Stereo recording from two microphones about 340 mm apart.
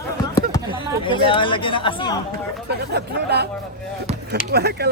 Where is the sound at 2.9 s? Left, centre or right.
Right.